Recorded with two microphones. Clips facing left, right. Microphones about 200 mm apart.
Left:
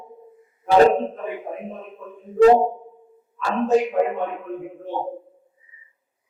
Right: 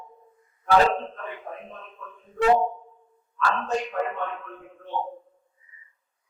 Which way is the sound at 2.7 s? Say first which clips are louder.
Left 6 dB; 30° left (ahead or behind).